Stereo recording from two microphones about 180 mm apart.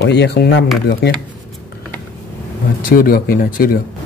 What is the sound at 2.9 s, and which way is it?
Speech, 55° left (ahead or behind).